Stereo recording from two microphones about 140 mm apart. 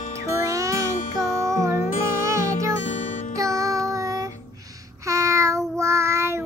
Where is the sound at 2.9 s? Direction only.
60° left (ahead or behind).